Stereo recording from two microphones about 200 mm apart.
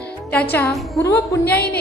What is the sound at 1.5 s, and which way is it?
Speech, 50° left (ahead or behind).